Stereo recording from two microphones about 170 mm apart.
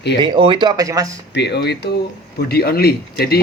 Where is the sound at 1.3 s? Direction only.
80° left.